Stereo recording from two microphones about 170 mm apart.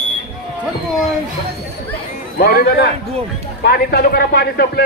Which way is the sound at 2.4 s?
65° left (ahead or behind).